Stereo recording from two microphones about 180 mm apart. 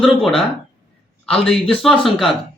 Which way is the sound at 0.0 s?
Centre (ahead or behind).